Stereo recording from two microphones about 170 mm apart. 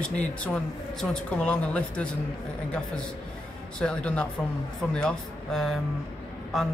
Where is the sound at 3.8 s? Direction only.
5° left (ahead or behind).